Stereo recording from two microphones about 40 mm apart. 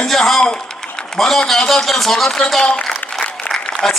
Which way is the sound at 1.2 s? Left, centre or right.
Centre.